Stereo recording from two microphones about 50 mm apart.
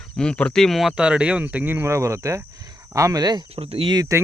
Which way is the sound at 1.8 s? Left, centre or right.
Right.